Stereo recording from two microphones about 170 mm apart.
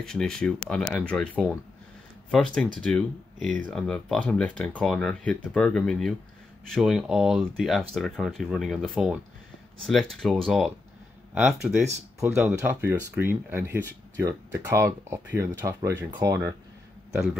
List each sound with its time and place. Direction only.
0.0 s speech: 5° left (ahead or behind)
10.2 s speech: centre (ahead or behind); by 16.5 s 20° right (ahead or behind)